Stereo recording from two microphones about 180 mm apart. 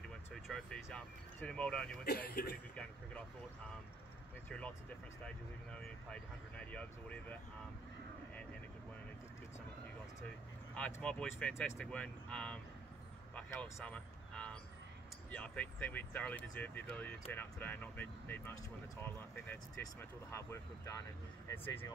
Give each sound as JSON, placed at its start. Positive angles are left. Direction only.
{"t": 0.3, "sound": "speech", "side_deg": 0}
{"t": 2.0, "sound": "speech", "side_deg": 60}
{"t": 2.7, "sound": "speech", "side_deg": 5}
{"t": 4.5, "sound": "speech", "side_deg": 5}
{"t": 10.7, "sound": "speech", "side_deg": 5}